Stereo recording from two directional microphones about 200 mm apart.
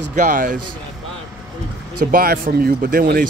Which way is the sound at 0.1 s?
40° right (ahead or behind).